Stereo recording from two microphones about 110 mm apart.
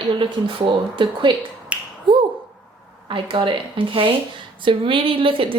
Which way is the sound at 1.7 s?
10° right (ahead or behind).